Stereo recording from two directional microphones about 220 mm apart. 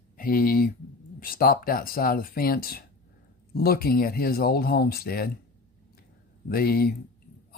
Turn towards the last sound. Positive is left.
turn(degrees=45)  # may be behind; listen again after turning